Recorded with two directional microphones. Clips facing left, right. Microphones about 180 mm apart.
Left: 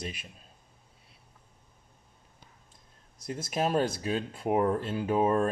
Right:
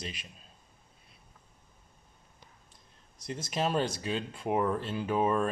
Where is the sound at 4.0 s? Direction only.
45° left (ahead or behind).